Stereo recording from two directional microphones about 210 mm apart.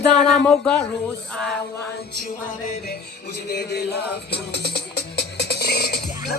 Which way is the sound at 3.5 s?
50° left (ahead or behind).